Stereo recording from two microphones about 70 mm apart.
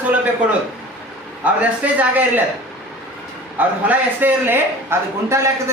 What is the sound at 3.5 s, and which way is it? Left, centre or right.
A woman's voice, right.